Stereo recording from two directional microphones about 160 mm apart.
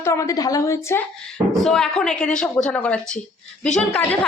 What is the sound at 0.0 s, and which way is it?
A woman's voice, 20° left (ahead or behind).